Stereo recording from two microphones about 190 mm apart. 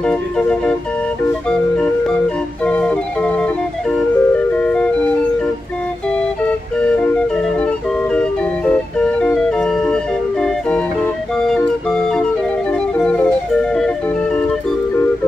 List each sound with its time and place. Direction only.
0.0 s organ: 5° left (ahead or behind)
1.5 s music: 5° left (ahead or behind)
2.6 s organ: 5° left (ahead or behind)
3.9 s music: 5° left (ahead or behind)
6.4 s organ: 5° left (ahead or behind)
8.1 s music: 5° left (ahead or behind)
10.4 s organ: 5° left (ahead or behind)